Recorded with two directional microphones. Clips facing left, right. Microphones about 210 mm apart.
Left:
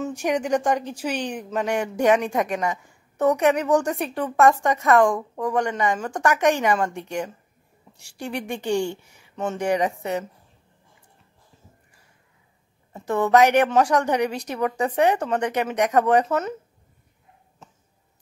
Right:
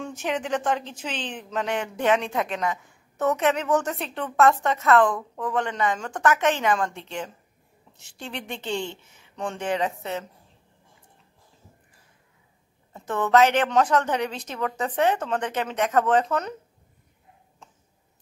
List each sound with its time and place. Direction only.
0.0 s speech: 10° left (ahead or behind)
12.9 s speech: 10° left (ahead or behind)